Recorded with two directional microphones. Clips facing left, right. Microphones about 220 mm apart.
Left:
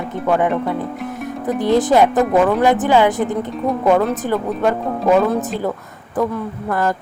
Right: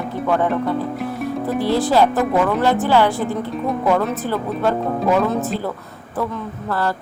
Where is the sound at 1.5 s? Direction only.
20° left (ahead or behind).